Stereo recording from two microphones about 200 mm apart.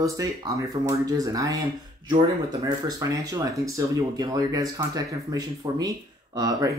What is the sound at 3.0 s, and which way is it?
Speech, 15° right (ahead or behind).